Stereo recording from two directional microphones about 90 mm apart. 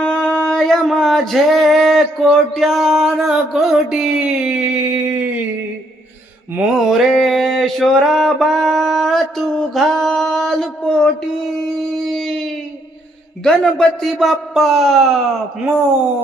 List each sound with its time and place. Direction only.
0.0 s singing: 10° left (ahead or behind); by 5.3 s 15° right (ahead or behind)
6.6 s a sound: centre (ahead or behind)
13.4 s singing: 5° left (ahead or behind)